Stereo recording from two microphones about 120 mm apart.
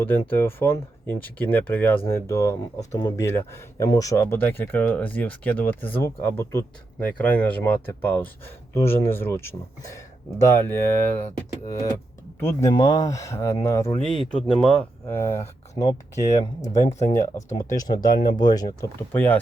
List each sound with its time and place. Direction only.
0.0 s speech: 15° left (ahead or behind)
3.0 s speech: 35° left (ahead or behind)
3.2 s speech: 20° left (ahead or behind)
11.7 s speech: 30° left (ahead or behind)
12.7 s speech: 30° left (ahead or behind)
14.6 s speech: 5° left (ahead or behind)
15.0 s speech: 20° left (ahead or behind)
16.9 s speech: 70° left (ahead or behind)
17.2 s speech: 25° left (ahead or behind)